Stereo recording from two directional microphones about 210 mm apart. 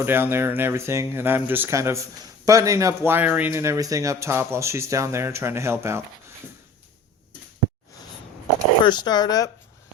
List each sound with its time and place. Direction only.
0.0 s speech: 10° right (ahead or behind)
8.8 s speech: 20° left (ahead or behind)